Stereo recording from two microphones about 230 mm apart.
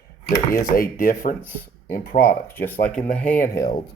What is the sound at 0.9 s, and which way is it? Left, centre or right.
Speech, left.